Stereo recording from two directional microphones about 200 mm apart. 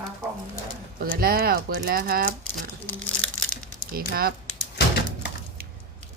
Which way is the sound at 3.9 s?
50° right (ahead or behind).